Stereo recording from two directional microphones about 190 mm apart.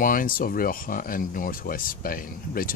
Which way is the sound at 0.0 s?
45° left (ahead or behind).